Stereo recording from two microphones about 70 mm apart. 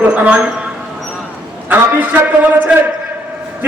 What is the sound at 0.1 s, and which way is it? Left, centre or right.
Speech, centre.